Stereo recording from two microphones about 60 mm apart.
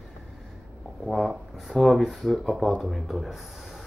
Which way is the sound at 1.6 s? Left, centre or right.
Centre.